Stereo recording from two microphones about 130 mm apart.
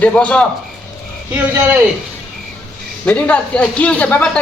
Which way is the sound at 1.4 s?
15° right (ahead or behind).